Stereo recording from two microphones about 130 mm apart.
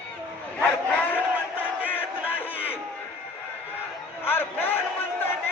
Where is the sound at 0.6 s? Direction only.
10° left (ahead or behind).